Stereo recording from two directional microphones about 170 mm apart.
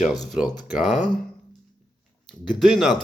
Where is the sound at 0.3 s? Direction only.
5° right (ahead or behind).